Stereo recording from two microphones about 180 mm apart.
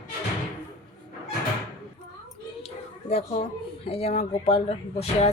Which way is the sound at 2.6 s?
35° left (ahead or behind).